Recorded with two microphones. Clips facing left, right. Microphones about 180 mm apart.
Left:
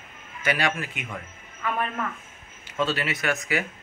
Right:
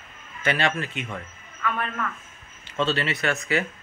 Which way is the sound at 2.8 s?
10° left (ahead or behind).